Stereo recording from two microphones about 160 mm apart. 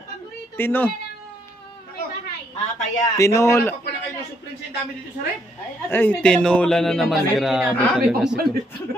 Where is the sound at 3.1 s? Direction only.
20° left (ahead or behind).